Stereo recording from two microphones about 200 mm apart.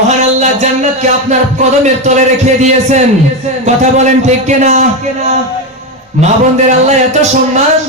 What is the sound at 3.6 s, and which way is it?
A man's voice, 35° right (ahead or behind).